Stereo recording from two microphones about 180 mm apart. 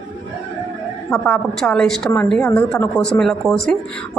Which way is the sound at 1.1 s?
Centre (ahead or behind).